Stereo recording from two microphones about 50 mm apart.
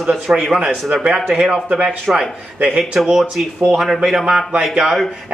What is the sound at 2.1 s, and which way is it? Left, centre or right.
Speech, right.